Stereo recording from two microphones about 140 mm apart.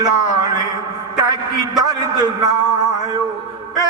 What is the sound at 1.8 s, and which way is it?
Speech, 25° right (ahead or behind).